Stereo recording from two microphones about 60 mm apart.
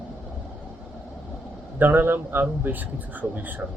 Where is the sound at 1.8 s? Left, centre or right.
Right.